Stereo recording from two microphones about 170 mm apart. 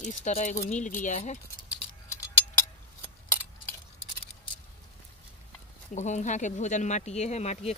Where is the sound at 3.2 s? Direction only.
15° left (ahead or behind).